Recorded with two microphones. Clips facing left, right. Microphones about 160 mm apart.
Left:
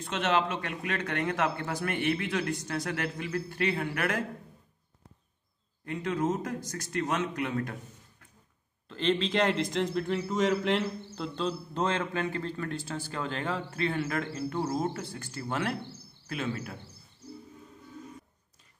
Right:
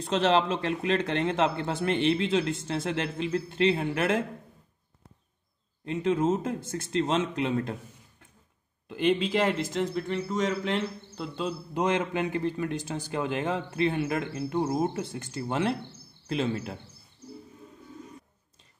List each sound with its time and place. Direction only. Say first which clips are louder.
0.0 s speech: right 4 dB; 35° right (ahead or behind)
5.9 s speech: right 4 dB; 25° right (ahead or behind)
8.8 s a man's voice: right 3 dB; 15° right (ahead or behind)